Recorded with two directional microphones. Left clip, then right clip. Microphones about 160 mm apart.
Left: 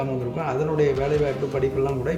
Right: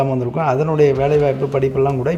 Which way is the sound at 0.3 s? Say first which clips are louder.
Right 8 dB; 45° right (ahead or behind).